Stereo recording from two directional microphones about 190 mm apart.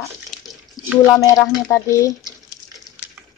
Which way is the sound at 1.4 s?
15° left (ahead or behind).